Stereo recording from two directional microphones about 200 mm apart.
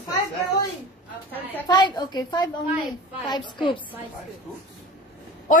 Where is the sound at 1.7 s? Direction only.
20° left (ahead or behind).